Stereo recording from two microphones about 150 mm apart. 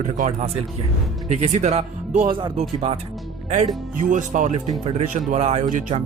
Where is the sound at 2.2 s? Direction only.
30° right (ahead or behind).